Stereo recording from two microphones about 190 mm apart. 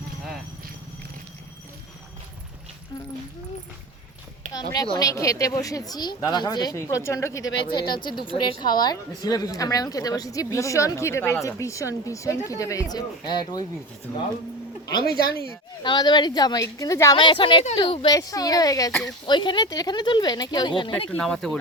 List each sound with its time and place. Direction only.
4.6 s a woman's voice: 25° left (ahead or behind)
15.8 s a woman's voice: 25° left (ahead or behind)
21.1 s speech: 5° left (ahead or behind)